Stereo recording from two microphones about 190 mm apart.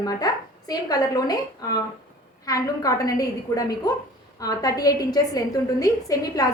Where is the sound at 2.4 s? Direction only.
20° left (ahead or behind).